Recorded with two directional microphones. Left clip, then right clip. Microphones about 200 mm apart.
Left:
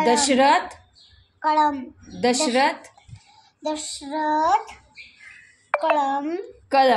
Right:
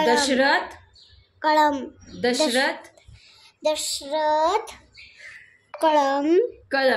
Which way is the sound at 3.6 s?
55° right (ahead or behind).